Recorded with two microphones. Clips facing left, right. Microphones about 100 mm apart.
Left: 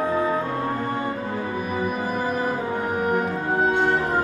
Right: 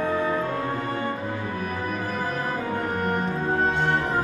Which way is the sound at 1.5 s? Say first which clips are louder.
Left 3 dB; 10° left (ahead or behind).